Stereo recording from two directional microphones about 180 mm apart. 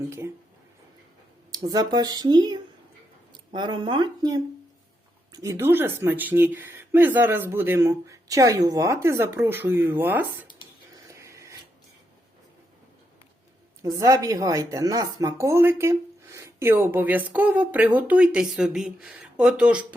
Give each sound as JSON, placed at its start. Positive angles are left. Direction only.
{"t": 1.5, "sound": "speech", "side_deg": -20}
{"t": 11.1, "sound": "a sound", "side_deg": -15}
{"t": 13.8, "sound": "speech", "side_deg": -20}